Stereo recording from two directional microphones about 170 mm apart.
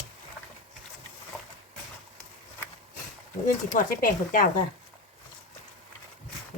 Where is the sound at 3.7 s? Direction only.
55° left (ahead or behind).